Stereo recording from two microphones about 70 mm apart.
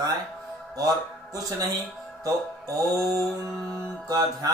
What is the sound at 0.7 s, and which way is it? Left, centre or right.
Speech, right.